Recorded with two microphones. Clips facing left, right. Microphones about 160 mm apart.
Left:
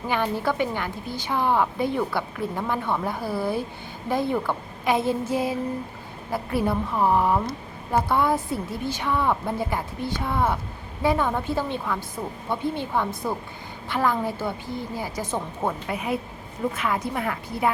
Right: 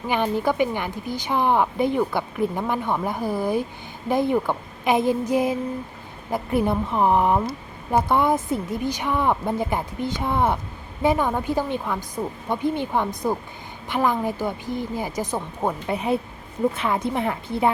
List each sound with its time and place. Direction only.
0.1 s a woman's voice: 15° right (ahead or behind)
15.9 s speech: 30° right (ahead or behind)